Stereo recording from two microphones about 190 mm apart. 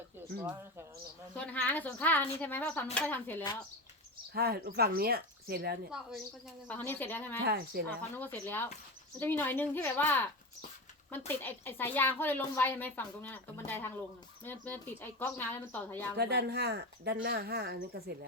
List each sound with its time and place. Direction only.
1.4 s speech: 10° left (ahead or behind)
4.4 s speech: 55° right (ahead or behind)
6.7 s speech: 10° left (ahead or behind)
7.4 s speech: 50° right (ahead or behind)
8.1 s speech: 10° left (ahead or behind)
11.3 s speech: 10° left (ahead or behind)
16.1 s speech: 60° right (ahead or behind)